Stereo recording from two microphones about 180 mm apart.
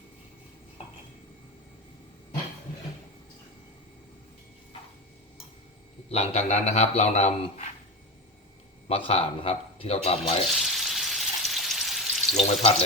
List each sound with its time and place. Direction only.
6.1 s a man's voice: 40° left (ahead or behind)
8.9 s a man's voice: 35° left (ahead or behind)
10.5 s frying: centre (ahead or behind)